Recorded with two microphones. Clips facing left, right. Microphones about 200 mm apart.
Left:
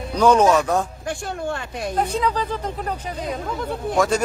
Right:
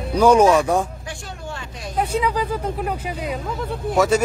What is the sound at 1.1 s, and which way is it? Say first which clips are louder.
Speech: left 7 dB; 55° left (ahead or behind).